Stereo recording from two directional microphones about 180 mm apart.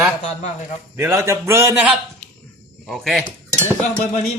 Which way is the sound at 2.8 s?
Centre (ahead or behind).